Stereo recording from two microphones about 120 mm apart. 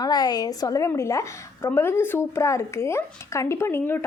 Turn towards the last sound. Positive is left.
turn(degrees=20)  # may be behind; listen again after turning